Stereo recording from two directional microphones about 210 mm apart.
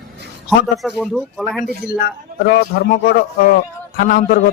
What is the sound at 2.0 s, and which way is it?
A man's voice, 45° left (ahead or behind).